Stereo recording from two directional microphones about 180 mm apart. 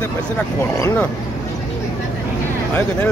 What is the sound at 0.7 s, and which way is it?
Speech, 15° left (ahead or behind).